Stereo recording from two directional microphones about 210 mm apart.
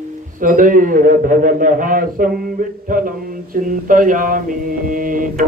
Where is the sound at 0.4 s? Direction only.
40° right (ahead or behind).